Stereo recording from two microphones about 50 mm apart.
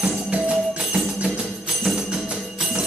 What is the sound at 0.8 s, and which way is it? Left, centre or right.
Music, centre.